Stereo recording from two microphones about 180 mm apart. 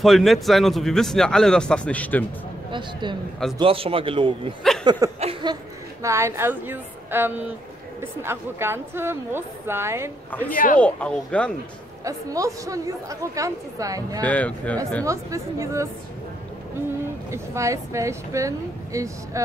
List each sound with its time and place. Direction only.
0.0 s a man's voice: centre (ahead or behind)
2.7 s speech: 25° right (ahead or behind)
5.2 s a sound: 30° right (ahead or behind)
6.0 s a woman's voice: 15° right (ahead or behind)
10.5 s speech: 50° left (ahead or behind)
10.8 s speech: 5° left (ahead or behind)
12.0 s speech: 20° right (ahead or behind)
14.2 s speech: 10° left (ahead or behind)
15.0 s a woman's voice: 15° right (ahead or behind)
17.3 s a woman's voice: 15° right (ahead or behind)